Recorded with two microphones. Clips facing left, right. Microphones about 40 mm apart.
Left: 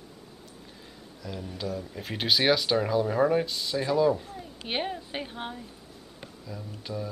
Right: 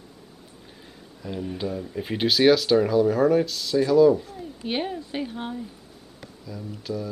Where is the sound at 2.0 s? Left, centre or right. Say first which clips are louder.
Right 6 dB; centre.